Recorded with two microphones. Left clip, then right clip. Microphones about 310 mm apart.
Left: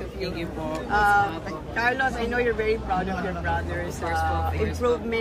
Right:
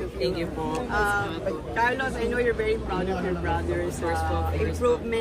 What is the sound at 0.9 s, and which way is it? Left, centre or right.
Speech, left.